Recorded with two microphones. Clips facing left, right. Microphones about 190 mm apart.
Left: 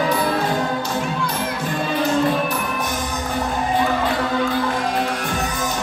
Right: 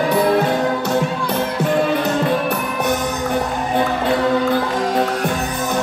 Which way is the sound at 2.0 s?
65° right (ahead or behind).